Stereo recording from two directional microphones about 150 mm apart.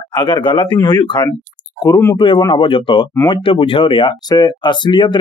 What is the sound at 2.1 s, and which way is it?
Speech, 35° left (ahead or behind).